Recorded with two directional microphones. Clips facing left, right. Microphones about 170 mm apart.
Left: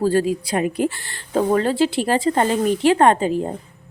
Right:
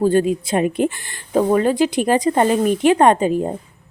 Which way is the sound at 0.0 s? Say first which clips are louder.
Right 2 dB; 20° right (ahead or behind).